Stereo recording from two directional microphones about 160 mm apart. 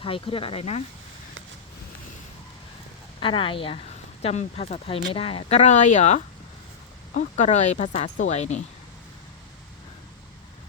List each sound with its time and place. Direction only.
0.0 s speech: 35° left (ahead or behind)
3.2 s speech: 35° left (ahead or behind)